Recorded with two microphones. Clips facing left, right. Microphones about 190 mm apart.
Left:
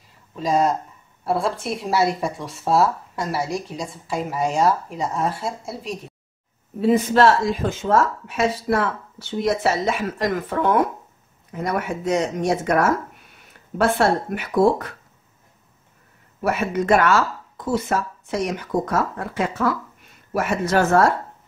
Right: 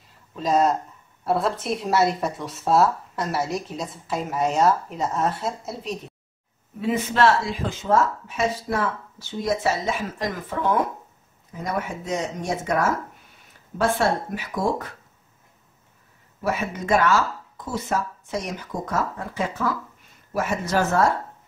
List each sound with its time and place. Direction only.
0.4 s speech: centre (ahead or behind)
6.8 s speech: 35° left (ahead or behind)
8.3 s speech: 75° left (ahead or behind)
16.4 s speech: 70° left (ahead or behind)